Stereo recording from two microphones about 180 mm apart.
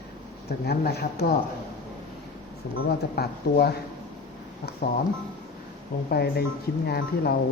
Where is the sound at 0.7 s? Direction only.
65° left (ahead or behind).